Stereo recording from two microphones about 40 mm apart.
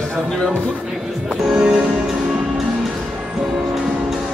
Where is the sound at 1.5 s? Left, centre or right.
Right.